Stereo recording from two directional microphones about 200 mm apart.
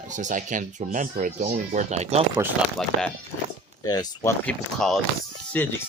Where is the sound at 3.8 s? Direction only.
20° left (ahead or behind).